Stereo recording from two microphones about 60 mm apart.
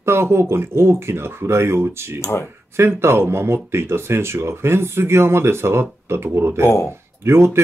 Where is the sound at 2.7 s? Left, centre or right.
Right.